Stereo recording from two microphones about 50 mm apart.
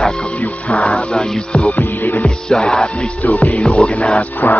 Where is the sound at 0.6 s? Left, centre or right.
Left.